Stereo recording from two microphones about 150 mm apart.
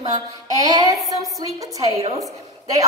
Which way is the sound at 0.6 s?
25° right (ahead or behind).